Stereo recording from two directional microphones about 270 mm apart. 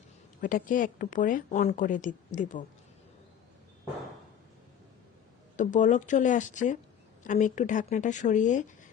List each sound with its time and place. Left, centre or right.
0.4 s speech: left
5.5 s speech: left